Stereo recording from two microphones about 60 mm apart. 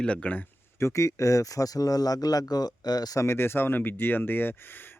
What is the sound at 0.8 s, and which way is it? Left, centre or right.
Speech, left.